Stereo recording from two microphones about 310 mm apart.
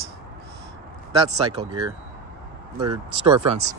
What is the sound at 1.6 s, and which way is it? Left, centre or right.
Speech, centre.